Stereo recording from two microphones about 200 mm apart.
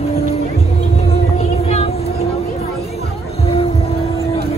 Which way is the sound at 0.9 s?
30° left (ahead or behind).